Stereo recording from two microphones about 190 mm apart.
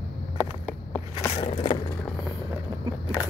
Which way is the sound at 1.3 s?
35° left (ahead or behind).